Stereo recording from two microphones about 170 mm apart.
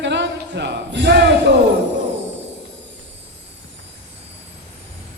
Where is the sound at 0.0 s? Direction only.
90° right.